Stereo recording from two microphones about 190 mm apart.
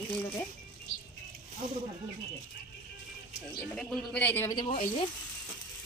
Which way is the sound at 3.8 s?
Centre (ahead or behind).